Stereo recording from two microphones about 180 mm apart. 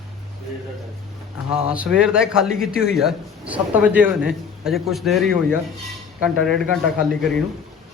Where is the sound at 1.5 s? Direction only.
5° right (ahead or behind).